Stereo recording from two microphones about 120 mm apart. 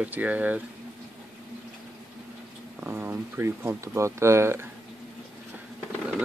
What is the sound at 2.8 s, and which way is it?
Speech, 15° right (ahead or behind).